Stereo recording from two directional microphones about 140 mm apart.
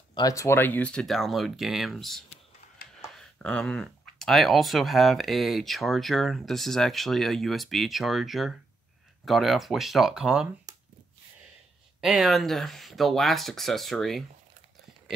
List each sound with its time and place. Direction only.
0.1 s speech: 25° left (ahead or behind); by 10.5 s 5° right (ahead or behind)
12.0 s speech: centre (ahead or behind)